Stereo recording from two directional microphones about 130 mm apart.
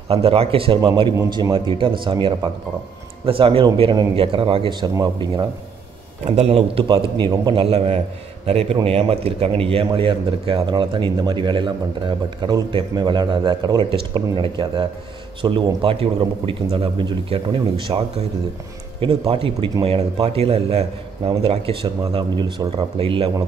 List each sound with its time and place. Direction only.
0.1 s a man's voice: 50° right (ahead or behind)
6.2 s a man's voice: 55° right (ahead or behind)
22.1 s a man's voice: 35° right (ahead or behind)